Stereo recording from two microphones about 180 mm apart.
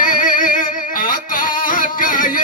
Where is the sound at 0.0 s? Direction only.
50° left (ahead or behind).